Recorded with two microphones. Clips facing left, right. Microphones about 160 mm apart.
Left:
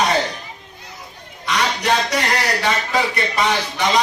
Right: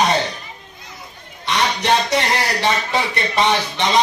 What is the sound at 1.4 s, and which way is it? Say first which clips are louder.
A man's voice: right 1 dB; 25° right (ahead or behind).